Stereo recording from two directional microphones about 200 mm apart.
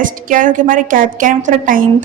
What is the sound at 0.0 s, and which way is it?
A woman's voice, 40° right (ahead or behind).